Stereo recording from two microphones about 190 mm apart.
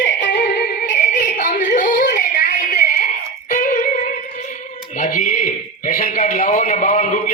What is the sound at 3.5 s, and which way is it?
Music, 40° left (ahead or behind).